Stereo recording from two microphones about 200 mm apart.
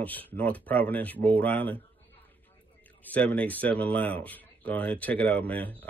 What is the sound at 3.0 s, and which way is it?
Speech, 5° left (ahead or behind).